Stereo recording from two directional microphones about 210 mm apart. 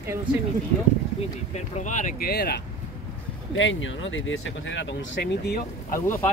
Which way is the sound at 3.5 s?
65° left (ahead or behind).